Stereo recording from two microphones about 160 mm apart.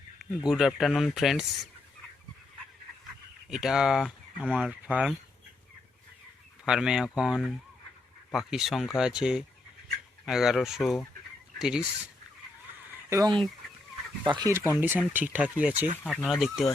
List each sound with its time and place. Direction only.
0.2 s speech: centre (ahead or behind)
3.5 s speech: 5° right (ahead or behind)
6.7 s speech: 5° right (ahead or behind)
13.1 s speech: 20° right (ahead or behind)
14.8 s speech: 10° right (ahead or behind)